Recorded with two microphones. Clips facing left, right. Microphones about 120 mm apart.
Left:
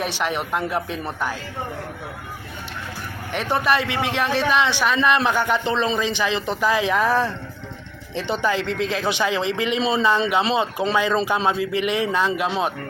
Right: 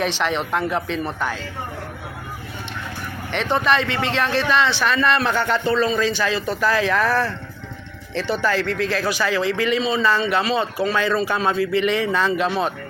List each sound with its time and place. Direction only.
0.0 s a man's voice: 10° left (ahead or behind)
3.3 s a man's voice: 10° left (ahead or behind)